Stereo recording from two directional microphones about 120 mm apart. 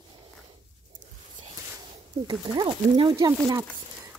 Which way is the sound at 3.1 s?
25° right (ahead or behind).